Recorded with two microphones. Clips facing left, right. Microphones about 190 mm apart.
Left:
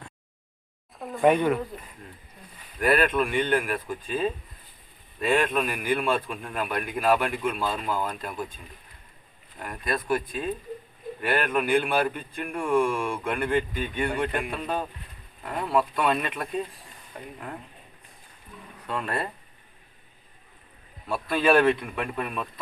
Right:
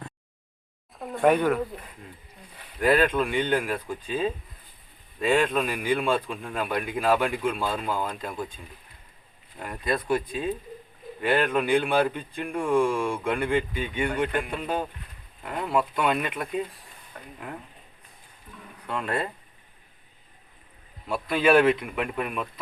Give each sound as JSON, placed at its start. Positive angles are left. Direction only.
{"t": 0.9, "sound": "speech", "side_deg": 0}
{"t": 2.8, "sound": "speech", "side_deg": -20}
{"t": 9.6, "sound": "speech", "side_deg": -20}
{"t": 18.9, "sound": "speech", "side_deg": -15}
{"t": 21.1, "sound": "speech", "side_deg": -10}